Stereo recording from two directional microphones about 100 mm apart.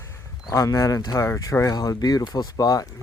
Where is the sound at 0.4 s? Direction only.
35° left (ahead or behind).